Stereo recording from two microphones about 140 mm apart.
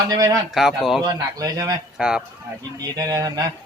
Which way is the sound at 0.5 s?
Centre (ahead or behind).